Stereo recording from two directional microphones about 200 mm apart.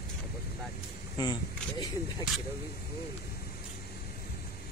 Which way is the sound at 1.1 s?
20° left (ahead or behind).